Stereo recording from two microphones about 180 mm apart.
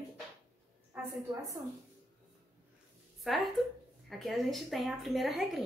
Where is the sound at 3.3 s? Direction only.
Centre (ahead or behind).